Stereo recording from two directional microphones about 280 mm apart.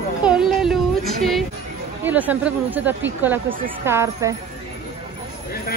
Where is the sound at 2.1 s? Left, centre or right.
Centre.